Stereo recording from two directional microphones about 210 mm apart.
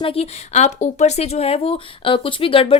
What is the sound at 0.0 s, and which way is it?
Speech, 25° left (ahead or behind).